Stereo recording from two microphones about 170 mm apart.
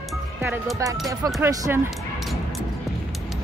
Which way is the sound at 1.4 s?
15° right (ahead or behind).